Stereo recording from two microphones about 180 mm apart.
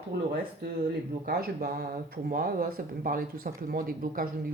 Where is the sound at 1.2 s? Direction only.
55° right (ahead or behind).